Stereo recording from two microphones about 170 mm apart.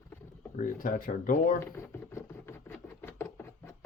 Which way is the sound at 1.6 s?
15° left (ahead or behind).